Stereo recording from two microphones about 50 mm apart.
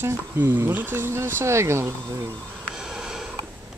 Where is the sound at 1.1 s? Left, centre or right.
Right.